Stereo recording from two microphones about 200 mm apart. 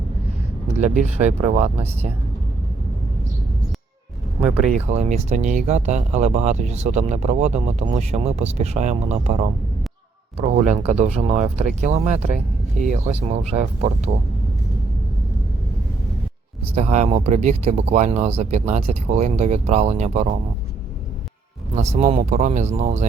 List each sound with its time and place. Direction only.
0.7 s speech: 35° right (ahead or behind)
4.4 s speech: 35° right (ahead or behind)
16.7 s speech: 35° right (ahead or behind)
21.8 s speech: 35° right (ahead or behind)